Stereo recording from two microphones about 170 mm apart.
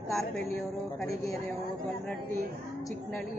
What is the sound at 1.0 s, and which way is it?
Speech, 20° left (ahead or behind).